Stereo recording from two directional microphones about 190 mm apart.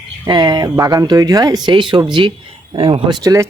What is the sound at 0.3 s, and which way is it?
Speech, 20° right (ahead or behind).